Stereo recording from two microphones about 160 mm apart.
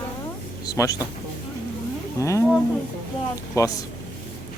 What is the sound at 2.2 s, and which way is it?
Speech, 20° left (ahead or behind).